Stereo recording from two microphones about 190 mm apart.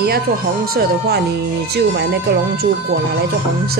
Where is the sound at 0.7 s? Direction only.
60° right (ahead or behind).